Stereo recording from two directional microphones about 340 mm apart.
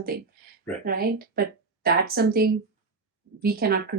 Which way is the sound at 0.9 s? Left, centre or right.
Right.